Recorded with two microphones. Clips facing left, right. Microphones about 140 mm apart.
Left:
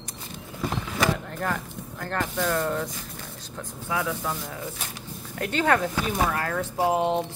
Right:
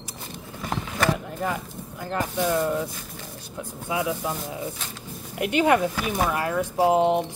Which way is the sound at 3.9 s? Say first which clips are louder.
Right 2 dB; 20° right (ahead or behind).